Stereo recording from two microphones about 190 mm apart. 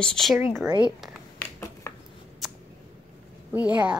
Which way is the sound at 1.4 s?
15° left (ahead or behind).